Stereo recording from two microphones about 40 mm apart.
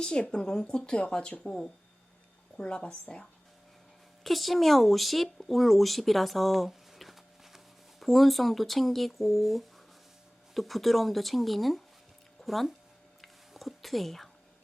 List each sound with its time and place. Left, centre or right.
0.0 s speech: left
2.6 s speech: left
4.2 s speech: centre
12.4 s a sound: centre